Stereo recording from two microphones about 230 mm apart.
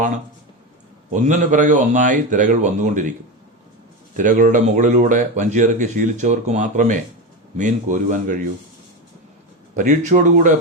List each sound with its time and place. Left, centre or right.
1.1 s speech: right
4.2 s speech: right
9.7 s speech: right